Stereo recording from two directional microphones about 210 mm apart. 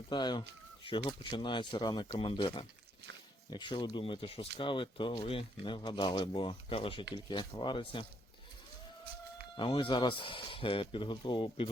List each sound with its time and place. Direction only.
0.1 s speech: 20° left (ahead or behind)
9.6 s speech: 25° left (ahead or behind)